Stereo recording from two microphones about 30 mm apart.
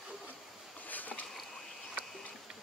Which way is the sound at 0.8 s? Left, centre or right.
Left.